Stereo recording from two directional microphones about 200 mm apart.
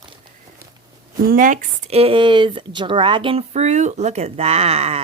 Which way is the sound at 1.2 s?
45° right (ahead or behind).